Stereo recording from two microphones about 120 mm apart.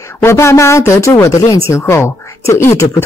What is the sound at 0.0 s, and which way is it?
Speech, 20° left (ahead or behind).